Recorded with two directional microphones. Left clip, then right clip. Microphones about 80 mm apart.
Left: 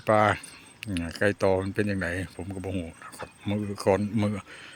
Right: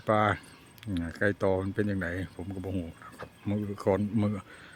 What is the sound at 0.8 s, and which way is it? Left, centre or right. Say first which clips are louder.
Speech: left 3 dB; centre.